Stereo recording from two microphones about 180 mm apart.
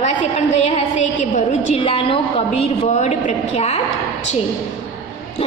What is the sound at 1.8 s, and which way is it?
A woman's voice, 30° left (ahead or behind).